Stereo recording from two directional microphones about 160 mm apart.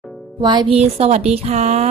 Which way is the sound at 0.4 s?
25° right (ahead or behind).